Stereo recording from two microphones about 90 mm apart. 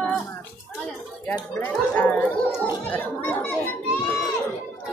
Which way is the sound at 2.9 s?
20° left (ahead or behind).